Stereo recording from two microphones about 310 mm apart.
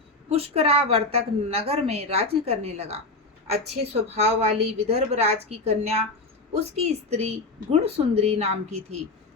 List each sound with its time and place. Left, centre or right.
0.3 s a woman's voice: centre